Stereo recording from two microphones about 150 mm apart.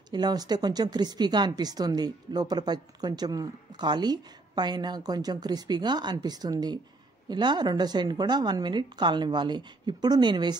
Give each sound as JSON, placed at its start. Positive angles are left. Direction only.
{"t": 0.1, "sound": "speech", "side_deg": -25}